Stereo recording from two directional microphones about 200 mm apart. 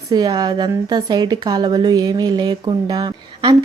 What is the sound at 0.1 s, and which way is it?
A woman's voice, 20° right (ahead or behind).